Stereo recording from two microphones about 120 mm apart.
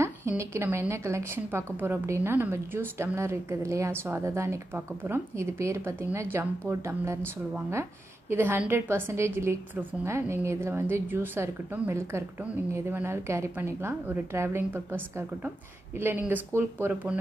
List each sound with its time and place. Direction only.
0.0 s a woman's voice: 25° right (ahead or behind)
8.3 s a woman's voice: 15° right (ahead or behind)